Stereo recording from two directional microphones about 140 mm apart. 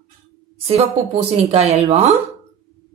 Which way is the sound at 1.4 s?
50° right (ahead or behind).